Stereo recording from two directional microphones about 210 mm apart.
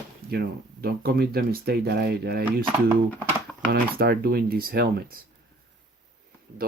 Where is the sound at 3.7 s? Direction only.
45° right (ahead or behind).